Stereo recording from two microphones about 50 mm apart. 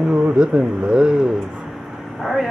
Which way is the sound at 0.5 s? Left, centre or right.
Right.